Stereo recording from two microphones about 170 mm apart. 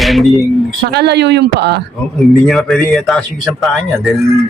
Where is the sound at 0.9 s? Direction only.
75° right (ahead or behind).